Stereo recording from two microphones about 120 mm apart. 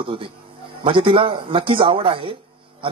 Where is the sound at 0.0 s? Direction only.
45° right (ahead or behind).